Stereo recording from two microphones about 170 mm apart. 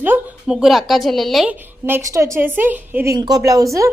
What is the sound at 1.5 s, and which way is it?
A woman's voice, 10° right (ahead or behind).